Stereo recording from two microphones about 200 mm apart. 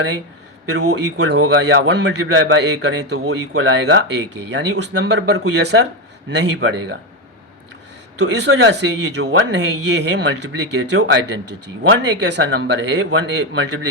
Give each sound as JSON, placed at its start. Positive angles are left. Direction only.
{"t": 0.8, "sound": "speech", "side_deg": -90}
{"t": 1.9, "sound": "speech", "side_deg": -60}
{"t": 8.2, "sound": "speech", "side_deg": -60}